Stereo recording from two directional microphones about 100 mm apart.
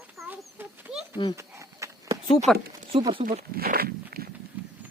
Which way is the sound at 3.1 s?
60° right (ahead or behind).